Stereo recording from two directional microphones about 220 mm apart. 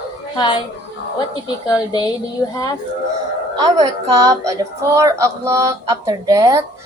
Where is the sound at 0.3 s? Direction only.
20° left (ahead or behind).